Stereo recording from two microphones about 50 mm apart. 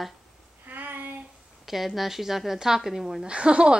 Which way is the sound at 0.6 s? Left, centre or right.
Right.